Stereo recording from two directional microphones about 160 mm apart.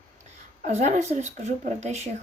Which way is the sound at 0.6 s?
45° right (ahead or behind).